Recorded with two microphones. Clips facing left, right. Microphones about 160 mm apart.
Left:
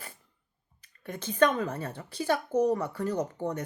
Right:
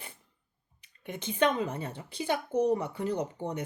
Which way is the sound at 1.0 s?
15° right (ahead or behind).